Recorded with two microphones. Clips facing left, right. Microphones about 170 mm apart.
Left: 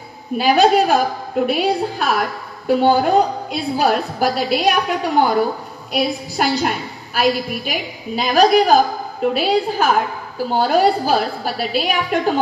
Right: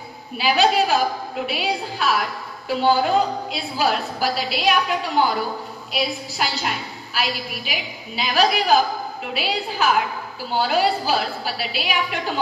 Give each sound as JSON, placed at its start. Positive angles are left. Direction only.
{"t": 0.4, "sound": "a woman's voice", "side_deg": 50}